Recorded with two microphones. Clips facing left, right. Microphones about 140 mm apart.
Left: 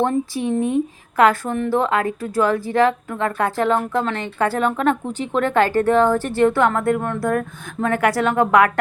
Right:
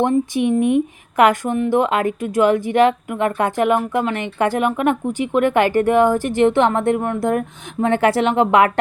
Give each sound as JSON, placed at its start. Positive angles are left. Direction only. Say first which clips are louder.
{"t": 0.0, "sound": "speech", "louder": "right 3 dB", "side_deg": -15}